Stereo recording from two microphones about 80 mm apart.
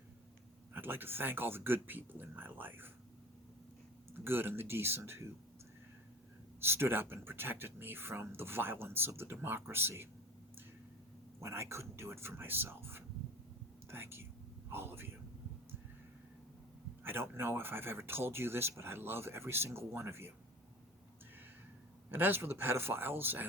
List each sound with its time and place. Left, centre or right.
0.7 s speech: right
4.1 s speech: right
6.6 s speech: right
11.3 s speech: right
14.7 s a sound: right
17.0 s speech: right
22.1 s speech: right